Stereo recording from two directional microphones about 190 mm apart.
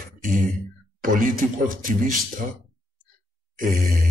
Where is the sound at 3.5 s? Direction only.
45° right (ahead or behind).